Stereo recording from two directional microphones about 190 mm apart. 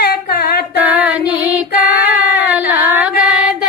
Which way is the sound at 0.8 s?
5° right (ahead or behind).